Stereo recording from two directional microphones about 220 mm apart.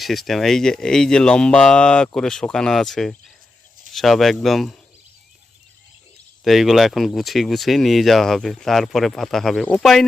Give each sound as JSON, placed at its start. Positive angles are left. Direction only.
{"t": 0.0, "sound": "speech", "side_deg": 0}
{"t": 6.4, "sound": "speech", "side_deg": 0}